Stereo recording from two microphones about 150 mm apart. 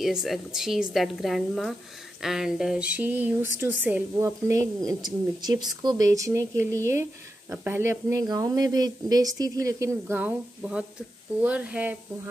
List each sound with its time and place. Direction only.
0.0 s a woman's voice: centre (ahead or behind)